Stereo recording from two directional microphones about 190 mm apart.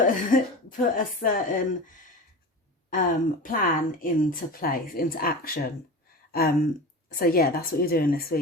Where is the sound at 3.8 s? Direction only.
45° left (ahead or behind).